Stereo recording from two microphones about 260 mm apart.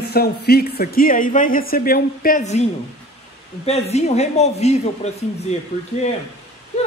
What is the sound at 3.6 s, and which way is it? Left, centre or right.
Speech, left.